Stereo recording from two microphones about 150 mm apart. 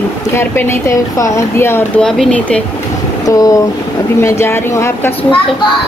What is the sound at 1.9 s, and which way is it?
Speech, 5° left (ahead or behind).